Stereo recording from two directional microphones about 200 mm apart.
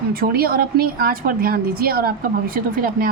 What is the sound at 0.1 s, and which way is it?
A woman's voice, 50° right (ahead or behind).